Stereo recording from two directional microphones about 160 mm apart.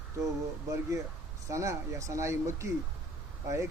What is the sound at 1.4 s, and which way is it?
Speech, 20° right (ahead or behind).